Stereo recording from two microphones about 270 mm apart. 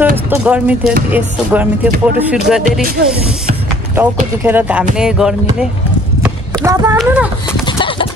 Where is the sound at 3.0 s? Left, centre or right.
Right.